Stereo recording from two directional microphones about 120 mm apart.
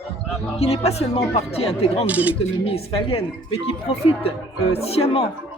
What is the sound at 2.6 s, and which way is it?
Speech, 50° left (ahead or behind).